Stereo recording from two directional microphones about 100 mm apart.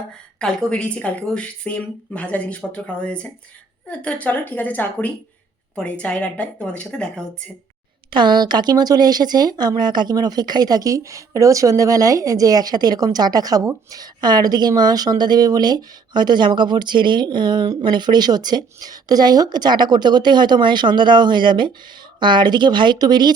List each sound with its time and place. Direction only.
0.3 s speech: 10° left (ahead or behind)
8.1 s speech: 50° right (ahead or behind)